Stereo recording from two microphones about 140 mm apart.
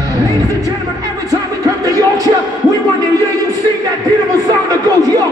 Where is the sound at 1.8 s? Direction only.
25° right (ahead or behind).